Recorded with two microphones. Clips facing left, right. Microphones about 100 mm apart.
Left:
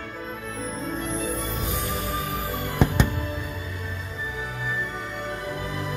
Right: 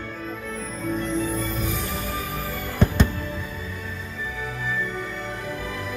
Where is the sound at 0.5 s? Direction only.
20° left (ahead or behind).